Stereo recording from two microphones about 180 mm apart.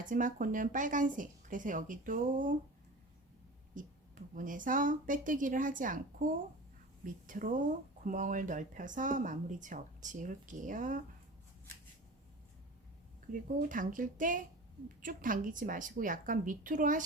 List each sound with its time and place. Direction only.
0.0 s speech: 45° right (ahead or behind)
3.8 s speech: 50° right (ahead or behind)
13.6 s speech: 50° right (ahead or behind)